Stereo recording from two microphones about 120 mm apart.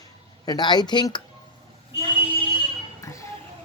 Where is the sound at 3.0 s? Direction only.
25° left (ahead or behind).